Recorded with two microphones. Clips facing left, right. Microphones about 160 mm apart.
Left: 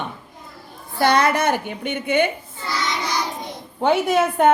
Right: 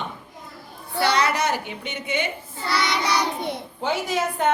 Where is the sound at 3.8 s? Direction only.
60° left (ahead or behind).